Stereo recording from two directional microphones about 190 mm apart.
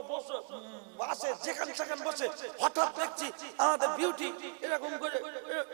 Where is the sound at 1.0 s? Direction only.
25° right (ahead or behind).